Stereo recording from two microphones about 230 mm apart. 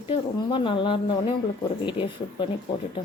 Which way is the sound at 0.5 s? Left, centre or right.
Left.